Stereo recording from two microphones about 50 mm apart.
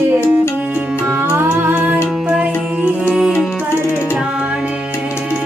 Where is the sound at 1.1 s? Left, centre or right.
Right.